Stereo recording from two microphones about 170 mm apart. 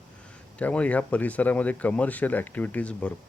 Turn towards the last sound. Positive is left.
turn(degrees=5)  # may be behind; listen again after turning